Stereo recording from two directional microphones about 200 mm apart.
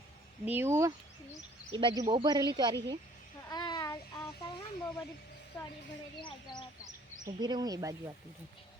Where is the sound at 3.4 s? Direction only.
20° left (ahead or behind).